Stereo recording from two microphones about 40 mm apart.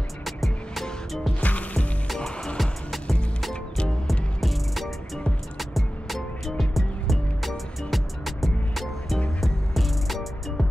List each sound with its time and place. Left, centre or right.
0.2 s music: centre
1.4 s music: left
2.1 s music: centre